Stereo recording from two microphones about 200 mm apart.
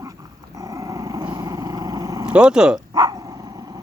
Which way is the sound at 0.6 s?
15° right (ahead or behind).